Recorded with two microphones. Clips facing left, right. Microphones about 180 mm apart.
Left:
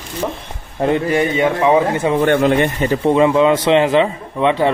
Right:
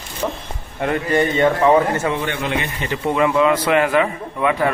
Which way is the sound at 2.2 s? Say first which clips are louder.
Left 10 dB; 45° left (ahead or behind).